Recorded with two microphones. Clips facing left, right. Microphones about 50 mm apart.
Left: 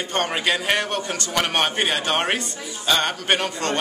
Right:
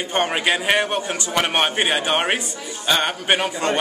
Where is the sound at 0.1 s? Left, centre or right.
Centre.